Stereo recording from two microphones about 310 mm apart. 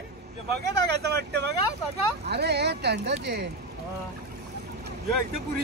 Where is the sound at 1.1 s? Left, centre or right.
Right.